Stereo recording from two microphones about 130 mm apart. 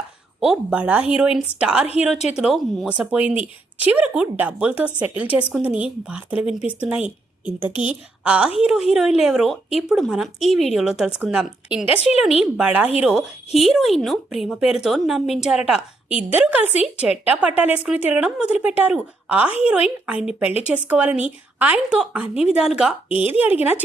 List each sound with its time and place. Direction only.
0.3 s a woman's voice: 5° right (ahead or behind)